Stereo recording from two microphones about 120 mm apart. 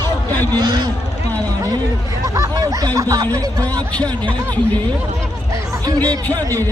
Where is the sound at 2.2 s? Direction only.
25° right (ahead or behind).